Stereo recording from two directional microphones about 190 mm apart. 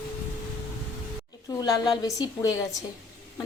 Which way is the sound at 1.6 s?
20° left (ahead or behind).